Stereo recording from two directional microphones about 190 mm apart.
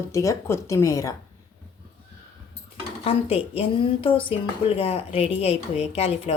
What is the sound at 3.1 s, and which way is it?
A woman's voice, 30° left (ahead or behind).